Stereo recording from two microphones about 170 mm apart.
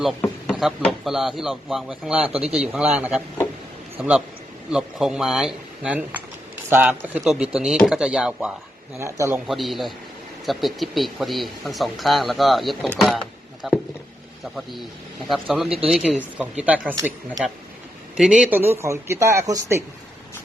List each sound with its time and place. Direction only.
0.4 s a man's voice: centre (ahead or behind)
9.0 s speech: 15° right (ahead or behind)
9.5 s speech: centre (ahead or behind)
13.0 s a sound: centre (ahead or behind)
14.5 s speech: centre (ahead or behind)
16.9 s speech: 20° right (ahead or behind)
18.2 s speech: 5° right (ahead or behind)